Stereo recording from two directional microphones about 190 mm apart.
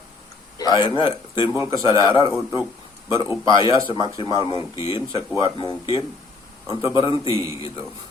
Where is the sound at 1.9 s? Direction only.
25° left (ahead or behind).